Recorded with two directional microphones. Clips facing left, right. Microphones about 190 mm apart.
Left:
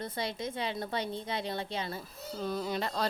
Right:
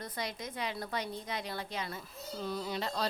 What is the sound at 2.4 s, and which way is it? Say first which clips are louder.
Speech: left 3 dB; 50° left (ahead or behind).